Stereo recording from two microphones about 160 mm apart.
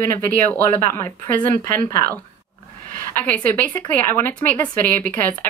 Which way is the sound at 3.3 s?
10° left (ahead or behind).